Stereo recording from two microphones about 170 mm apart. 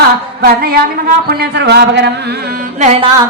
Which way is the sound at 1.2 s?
75° right (ahead or behind).